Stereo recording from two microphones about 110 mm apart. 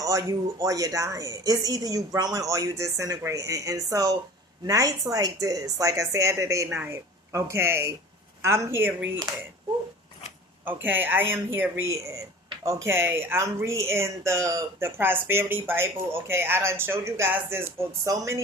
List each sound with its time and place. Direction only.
0.0 s a woman's voice: 30° right (ahead or behind)
10.7 s speech: 15° right (ahead or behind)